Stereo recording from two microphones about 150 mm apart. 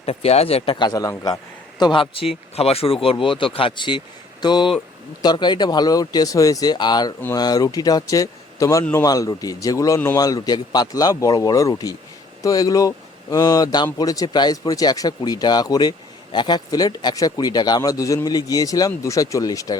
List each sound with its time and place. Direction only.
0.0 s speech: 40° left (ahead or behind); by 19.7 s 25° left (ahead or behind)